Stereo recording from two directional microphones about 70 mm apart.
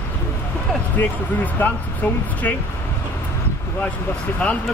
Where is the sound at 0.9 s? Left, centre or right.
Left.